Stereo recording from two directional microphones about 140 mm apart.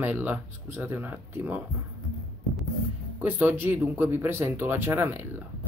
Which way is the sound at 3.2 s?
15° right (ahead or behind).